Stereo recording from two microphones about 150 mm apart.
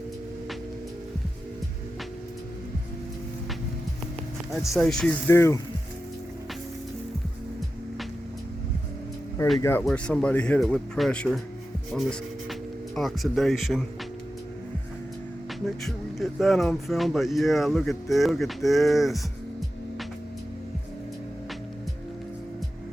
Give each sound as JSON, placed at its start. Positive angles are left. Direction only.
{"t": 4.5, "sound": "speech", "side_deg": 0}
{"t": 5.3, "sound": "speech", "side_deg": 15}
{"t": 9.6, "sound": "speech", "side_deg": 15}
{"t": 9.8, "sound": "speech", "side_deg": 5}
{"t": 13.0, "sound": "speech", "side_deg": 0}
{"t": 15.6, "sound": "speech", "side_deg": 0}